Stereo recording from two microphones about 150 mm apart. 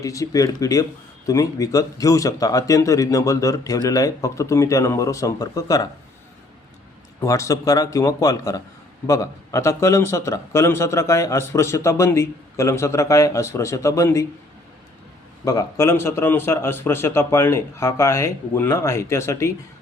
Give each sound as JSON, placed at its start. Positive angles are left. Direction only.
{"t": 0.0, "sound": "speech", "side_deg": 20}
{"t": 7.2, "sound": "speech", "side_deg": 20}
{"t": 15.4, "sound": "a man's voice", "side_deg": 20}